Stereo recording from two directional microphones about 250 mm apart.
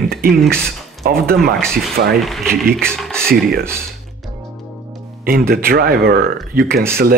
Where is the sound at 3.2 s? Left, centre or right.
Right.